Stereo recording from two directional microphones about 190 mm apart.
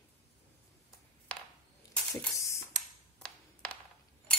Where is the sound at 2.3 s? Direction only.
15° left (ahead or behind).